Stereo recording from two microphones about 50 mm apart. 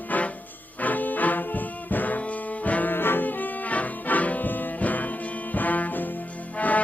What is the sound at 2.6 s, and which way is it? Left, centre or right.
Trombone, left.